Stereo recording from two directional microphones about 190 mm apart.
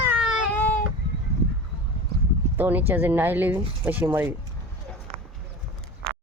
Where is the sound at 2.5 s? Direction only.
10° right (ahead or behind).